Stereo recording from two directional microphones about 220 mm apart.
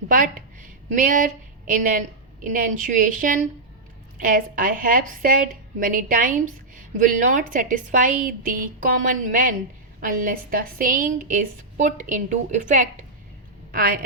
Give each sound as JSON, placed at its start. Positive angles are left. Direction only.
{"t": 0.1, "sound": "a woman's voice", "side_deg": -40}